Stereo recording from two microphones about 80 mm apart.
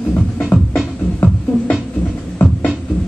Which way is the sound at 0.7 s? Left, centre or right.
Centre.